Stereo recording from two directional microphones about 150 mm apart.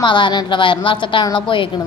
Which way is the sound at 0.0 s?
30° left (ahead or behind).